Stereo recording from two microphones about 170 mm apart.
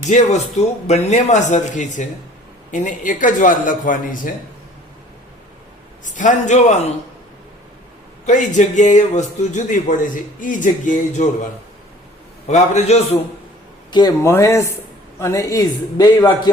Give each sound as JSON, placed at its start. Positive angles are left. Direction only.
{"t": 0.1, "sound": "a man's voice", "side_deg": 40}
{"t": 6.1, "sound": "a man's voice", "side_deg": 45}
{"t": 8.3, "sound": "a man's voice", "side_deg": 45}
{"t": 12.5, "sound": "a man's voice", "side_deg": 40}
{"t": 13.9, "sound": "a man's voice", "side_deg": 20}